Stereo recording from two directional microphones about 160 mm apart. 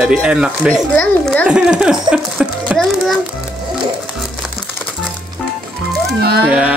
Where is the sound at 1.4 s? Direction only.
5° right (ahead or behind).